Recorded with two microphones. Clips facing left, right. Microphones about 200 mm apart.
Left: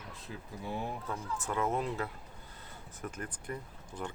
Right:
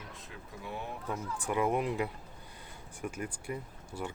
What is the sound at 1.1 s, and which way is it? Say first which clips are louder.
Speech: right 5 dB; 15° right (ahead or behind).